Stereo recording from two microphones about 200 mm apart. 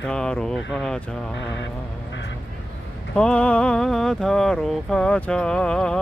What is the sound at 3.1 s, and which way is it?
Speech, 5° left (ahead or behind).